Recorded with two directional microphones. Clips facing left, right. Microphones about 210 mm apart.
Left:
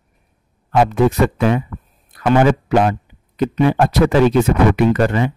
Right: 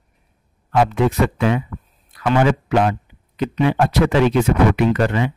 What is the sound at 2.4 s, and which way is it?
Speech, 40° left (ahead or behind).